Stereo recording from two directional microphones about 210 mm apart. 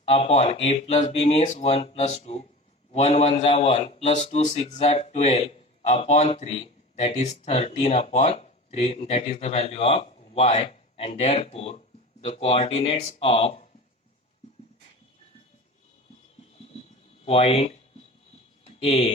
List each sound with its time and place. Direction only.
0.1 s a man's voice: 30° left (ahead or behind)
17.2 s a man's voice: 30° left (ahead or behind)
18.6 s a sound: 30° left (ahead or behind)